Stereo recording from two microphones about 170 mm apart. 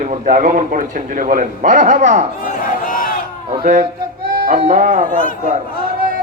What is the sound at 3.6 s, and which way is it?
Speech, 50° right (ahead or behind).